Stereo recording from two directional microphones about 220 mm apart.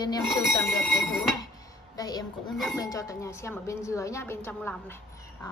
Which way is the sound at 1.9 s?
15° left (ahead or behind).